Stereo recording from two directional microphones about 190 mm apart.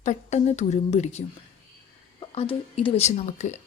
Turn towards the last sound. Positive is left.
turn(degrees=40)  # may be behind; listen again after turning